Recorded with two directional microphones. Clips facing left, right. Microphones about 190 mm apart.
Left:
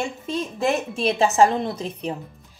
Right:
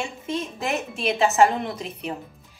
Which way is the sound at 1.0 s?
35° left (ahead or behind).